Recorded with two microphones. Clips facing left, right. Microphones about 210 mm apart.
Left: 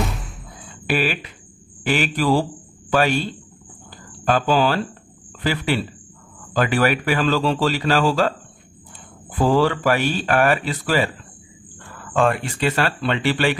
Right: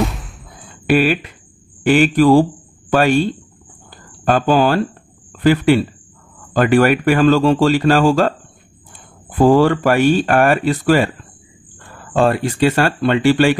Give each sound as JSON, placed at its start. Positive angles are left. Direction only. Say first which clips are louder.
{"t": 0.0, "sound": "a sound", "louder": "right 6 dB", "side_deg": 0}
{"t": 0.8, "sound": "speech", "louder": "right 8 dB", "side_deg": -45}
{"t": 4.3, "sound": "speech", "louder": "right 4 dB", "side_deg": -50}
{"t": 9.4, "sound": "speech", "louder": "right 6 dB", "side_deg": -50}
{"t": 12.0, "sound": "speech", "louder": "right 4 dB", "side_deg": -35}